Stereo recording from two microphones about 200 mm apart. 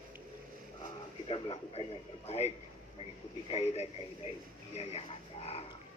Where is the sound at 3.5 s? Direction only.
30° left (ahead or behind).